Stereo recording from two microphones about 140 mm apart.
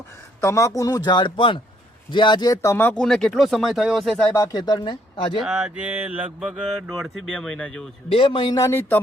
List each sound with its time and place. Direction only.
0.4 s speech: 20° left (ahead or behind)
2.6 s speech: 15° left (ahead or behind)
3.0 s speech: 5° left (ahead or behind)
4.4 s speech: 25° left (ahead or behind)
5.4 s a sound: 5° right (ahead or behind)
6.8 s speech: centre (ahead or behind)
8.1 s speech: 40° left (ahead or behind)
8.5 s speech: 20° left (ahead or behind)